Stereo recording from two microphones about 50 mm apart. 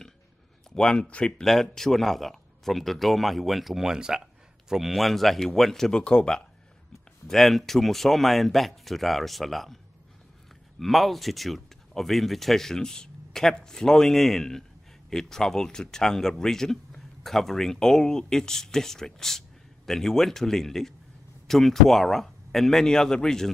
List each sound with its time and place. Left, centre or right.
0.7 s speech: centre
1.4 s speech: centre
7.2 s speech: centre
10.8 s speech: centre